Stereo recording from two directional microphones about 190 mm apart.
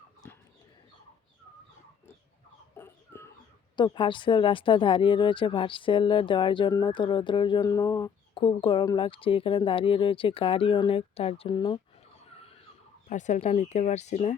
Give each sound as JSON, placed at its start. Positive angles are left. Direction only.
{"t": 0.2, "sound": "bird", "side_deg": 10}
{"t": 2.7, "sound": "a sound", "side_deg": 10}
{"t": 3.8, "sound": "speech", "side_deg": 25}
{"t": 13.1, "sound": "speech", "side_deg": 40}